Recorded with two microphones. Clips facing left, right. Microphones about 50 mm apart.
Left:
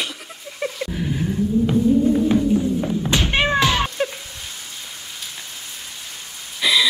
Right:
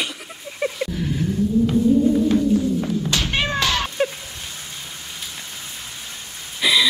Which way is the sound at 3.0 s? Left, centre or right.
Left.